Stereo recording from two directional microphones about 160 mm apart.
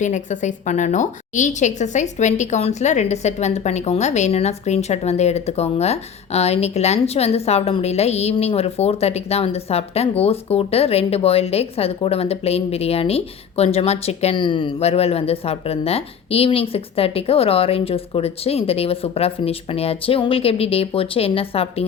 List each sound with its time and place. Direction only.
0.0 s a woman's voice: 50° left (ahead or behind)